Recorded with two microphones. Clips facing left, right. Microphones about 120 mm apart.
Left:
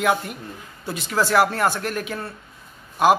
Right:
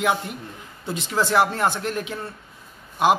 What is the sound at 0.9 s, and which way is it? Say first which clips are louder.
A man's voice: left 1 dB; 20° right (ahead or behind).